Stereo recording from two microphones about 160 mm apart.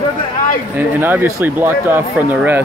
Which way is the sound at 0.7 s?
10° right (ahead or behind).